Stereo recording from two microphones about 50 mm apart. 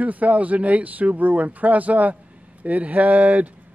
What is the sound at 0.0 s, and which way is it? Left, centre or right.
Speech, right.